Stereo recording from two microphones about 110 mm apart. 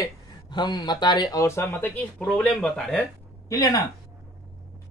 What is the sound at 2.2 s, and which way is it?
Speech, 10° left (ahead or behind).